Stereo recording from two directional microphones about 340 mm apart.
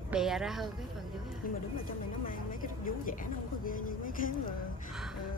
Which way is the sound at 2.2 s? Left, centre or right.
Left.